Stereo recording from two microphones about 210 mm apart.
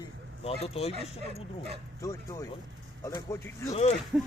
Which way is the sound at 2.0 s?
15° left (ahead or behind).